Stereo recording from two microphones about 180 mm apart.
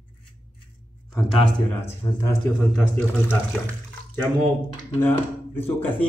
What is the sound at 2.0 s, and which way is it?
Speech, 20° left (ahead or behind).